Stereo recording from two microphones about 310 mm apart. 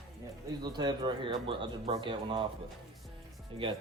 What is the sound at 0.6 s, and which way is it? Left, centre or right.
Speech, centre.